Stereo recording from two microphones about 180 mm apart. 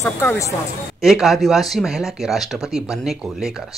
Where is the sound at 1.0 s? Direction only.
Centre (ahead or behind).